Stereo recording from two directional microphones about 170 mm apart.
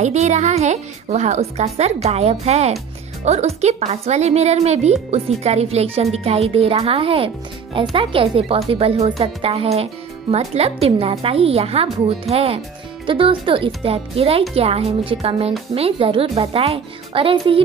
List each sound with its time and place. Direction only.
0.0 s speech: 40° right (ahead or behind)